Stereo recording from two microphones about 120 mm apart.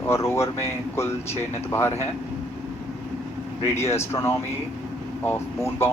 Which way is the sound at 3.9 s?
20° left (ahead or behind).